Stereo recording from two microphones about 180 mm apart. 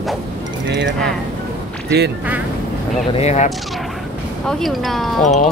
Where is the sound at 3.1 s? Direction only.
40° left (ahead or behind).